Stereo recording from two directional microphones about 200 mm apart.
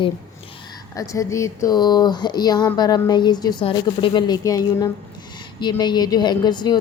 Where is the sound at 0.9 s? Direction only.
15° left (ahead or behind).